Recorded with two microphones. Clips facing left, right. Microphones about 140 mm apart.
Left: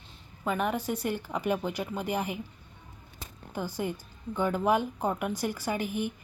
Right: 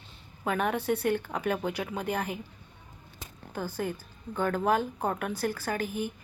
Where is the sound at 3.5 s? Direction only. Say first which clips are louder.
Even; 15° left (ahead or behind).